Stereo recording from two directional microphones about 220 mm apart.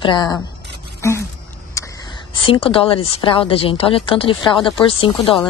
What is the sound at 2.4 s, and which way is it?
Speech, 25° left (ahead or behind).